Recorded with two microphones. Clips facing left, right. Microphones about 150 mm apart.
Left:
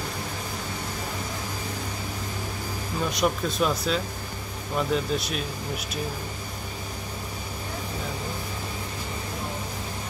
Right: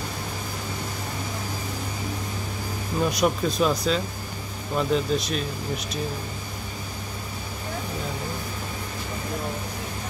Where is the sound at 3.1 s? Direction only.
Centre (ahead or behind).